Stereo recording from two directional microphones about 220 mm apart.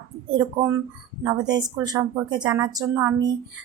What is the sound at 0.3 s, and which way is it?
Speech, 15° right (ahead or behind).